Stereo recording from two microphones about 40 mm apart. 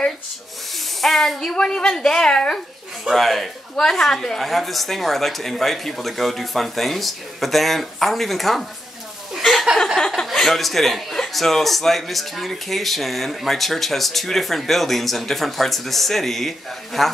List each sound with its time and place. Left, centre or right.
0.7 s a woman's voice: centre
3.1 s a woman's voice: centre
4.4 s a man's voice: centre
9.4 s a sound: centre
9.9 s a woman's voice: centre